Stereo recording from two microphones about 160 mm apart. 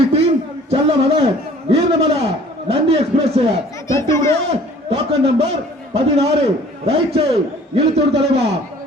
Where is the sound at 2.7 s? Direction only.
35° right (ahead or behind).